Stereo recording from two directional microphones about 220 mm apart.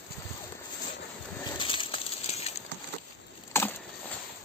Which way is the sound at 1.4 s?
20° left (ahead or behind).